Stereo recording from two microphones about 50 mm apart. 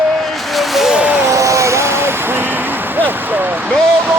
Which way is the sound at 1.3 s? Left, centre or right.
Right.